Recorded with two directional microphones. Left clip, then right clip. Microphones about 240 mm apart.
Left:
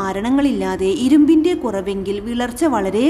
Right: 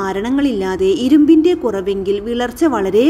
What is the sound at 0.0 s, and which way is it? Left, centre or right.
Speech, centre.